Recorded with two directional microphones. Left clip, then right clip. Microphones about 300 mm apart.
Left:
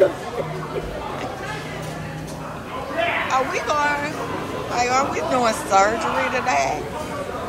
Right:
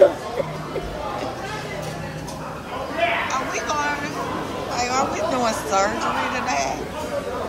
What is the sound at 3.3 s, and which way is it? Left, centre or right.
Speech, centre.